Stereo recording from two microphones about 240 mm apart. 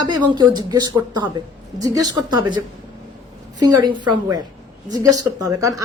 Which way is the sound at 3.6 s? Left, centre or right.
Centre.